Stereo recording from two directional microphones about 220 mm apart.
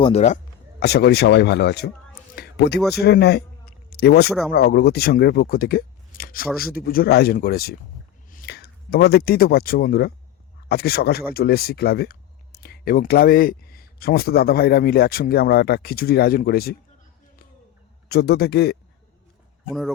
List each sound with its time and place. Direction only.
0.0 s speech: 30° left (ahead or behind)
0.8 s speech: 45° left (ahead or behind)
2.3 s a sound: 45° left (ahead or behind)
3.0 s speech: 50° left (ahead or behind)
18.1 s speech: 45° left (ahead or behind)